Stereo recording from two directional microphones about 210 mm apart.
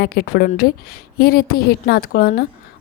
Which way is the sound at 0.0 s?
50° left (ahead or behind).